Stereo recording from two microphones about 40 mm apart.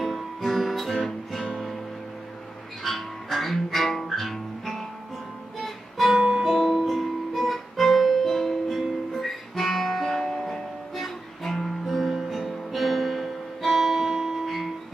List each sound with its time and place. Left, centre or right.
0.0 s guitar: centre
2.8 s music: centre
6.1 s music: centre
6.4 s music: centre
11.8 s music: centre